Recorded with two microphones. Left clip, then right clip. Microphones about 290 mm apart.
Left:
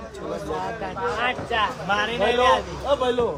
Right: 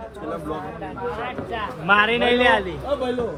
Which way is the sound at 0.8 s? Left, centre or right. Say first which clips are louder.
Left 4 dB; left.